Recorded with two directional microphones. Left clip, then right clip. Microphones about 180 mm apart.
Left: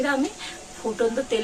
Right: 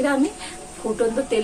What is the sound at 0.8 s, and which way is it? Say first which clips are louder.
Speech: right 3 dB; 20° left (ahead or behind).